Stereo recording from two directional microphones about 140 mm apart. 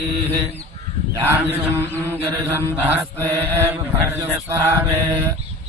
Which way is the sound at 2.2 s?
15° right (ahead or behind).